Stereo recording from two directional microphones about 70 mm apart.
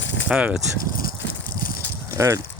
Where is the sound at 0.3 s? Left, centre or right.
Centre.